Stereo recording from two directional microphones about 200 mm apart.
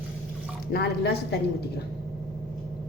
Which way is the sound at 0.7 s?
55° left (ahead or behind).